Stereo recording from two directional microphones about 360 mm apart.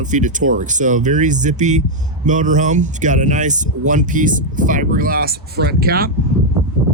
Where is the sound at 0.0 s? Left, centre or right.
Right.